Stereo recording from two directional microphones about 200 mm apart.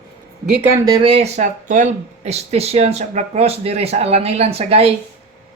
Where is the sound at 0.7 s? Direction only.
20° right (ahead or behind).